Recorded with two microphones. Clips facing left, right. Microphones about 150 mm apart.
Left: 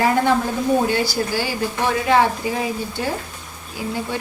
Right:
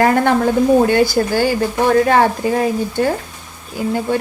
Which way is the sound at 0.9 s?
50° right (ahead or behind).